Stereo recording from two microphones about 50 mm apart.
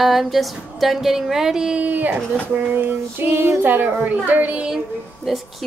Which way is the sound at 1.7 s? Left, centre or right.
Right.